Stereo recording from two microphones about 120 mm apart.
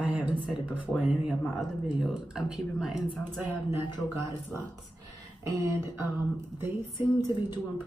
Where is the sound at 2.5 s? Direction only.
5° right (ahead or behind).